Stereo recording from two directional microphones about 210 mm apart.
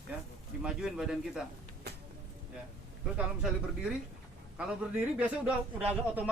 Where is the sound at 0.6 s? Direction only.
5° right (ahead or behind).